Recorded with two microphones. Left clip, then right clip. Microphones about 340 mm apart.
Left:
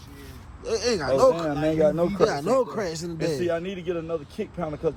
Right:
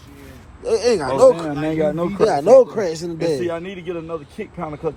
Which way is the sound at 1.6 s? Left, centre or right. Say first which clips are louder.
Right 1 dB; right.